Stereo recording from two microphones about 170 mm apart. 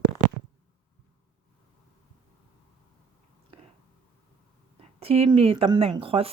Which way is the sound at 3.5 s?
35° right (ahead or behind).